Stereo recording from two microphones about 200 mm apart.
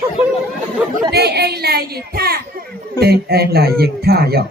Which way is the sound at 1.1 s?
55° right (ahead or behind).